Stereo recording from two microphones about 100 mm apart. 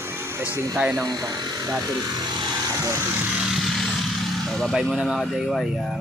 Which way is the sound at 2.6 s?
35° right (ahead or behind).